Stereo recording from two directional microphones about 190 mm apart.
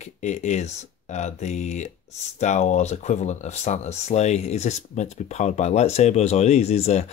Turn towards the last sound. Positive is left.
turn(degrees=35)  # may be behind; listen again after turning